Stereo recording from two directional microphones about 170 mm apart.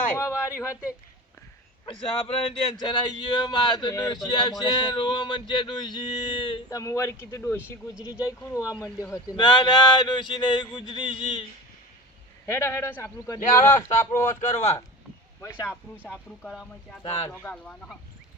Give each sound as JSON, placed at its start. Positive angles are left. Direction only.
{"t": 0.2, "sound": "a man's voice", "side_deg": 15}
{"t": 1.8, "sound": "speech", "side_deg": 30}
{"t": 12.5, "sound": "a man's voice", "side_deg": 15}
{"t": 14.5, "sound": "speech", "side_deg": 40}
{"t": 15.4, "sound": "a man's voice", "side_deg": 20}
{"t": 16.1, "sound": "a man's voice", "side_deg": 5}